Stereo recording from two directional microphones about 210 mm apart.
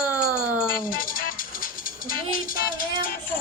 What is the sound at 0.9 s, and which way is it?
Music, 40° left (ahead or behind).